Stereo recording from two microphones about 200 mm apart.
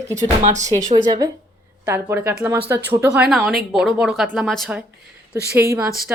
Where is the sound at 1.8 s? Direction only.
10° right (ahead or behind).